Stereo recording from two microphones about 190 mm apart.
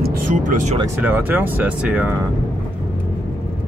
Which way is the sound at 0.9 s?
10° right (ahead or behind).